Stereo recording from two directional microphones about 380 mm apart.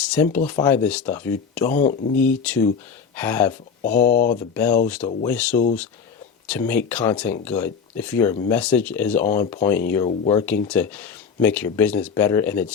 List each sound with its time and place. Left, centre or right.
0.1 s speech: centre
1.6 s speech: centre
2.2 s speech: centre
4.1 s speech: left
4.4 s speech: centre